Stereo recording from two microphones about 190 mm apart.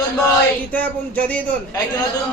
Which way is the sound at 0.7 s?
10° left (ahead or behind).